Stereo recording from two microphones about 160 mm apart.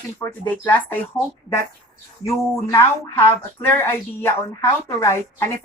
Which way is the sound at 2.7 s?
15° left (ahead or behind).